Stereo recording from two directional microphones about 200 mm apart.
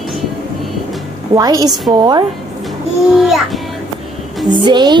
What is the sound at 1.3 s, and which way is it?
Speech, 20° right (ahead or behind).